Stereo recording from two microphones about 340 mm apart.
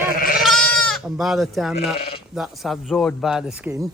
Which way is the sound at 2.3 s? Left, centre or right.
Centre.